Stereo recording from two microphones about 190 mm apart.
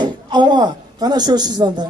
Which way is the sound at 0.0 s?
25° right (ahead or behind).